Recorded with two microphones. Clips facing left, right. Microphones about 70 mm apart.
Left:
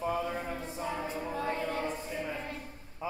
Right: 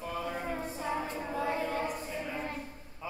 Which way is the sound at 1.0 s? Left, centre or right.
Centre.